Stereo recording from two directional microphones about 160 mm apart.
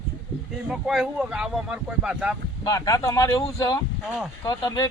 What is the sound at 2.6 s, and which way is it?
Speech, 20° left (ahead or behind).